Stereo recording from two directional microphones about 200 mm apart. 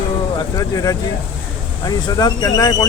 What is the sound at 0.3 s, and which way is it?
Speech, 15° left (ahead or behind).